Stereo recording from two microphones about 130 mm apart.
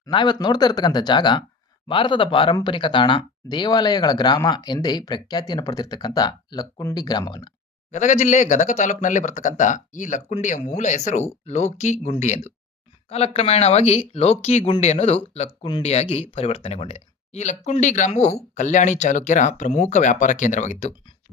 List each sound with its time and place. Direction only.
0.0 s speech: 35° left (ahead or behind)
7.9 s speech: 65° left (ahead or behind)